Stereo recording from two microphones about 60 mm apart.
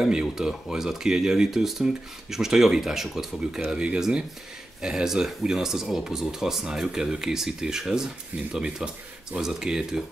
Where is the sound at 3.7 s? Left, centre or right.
Centre.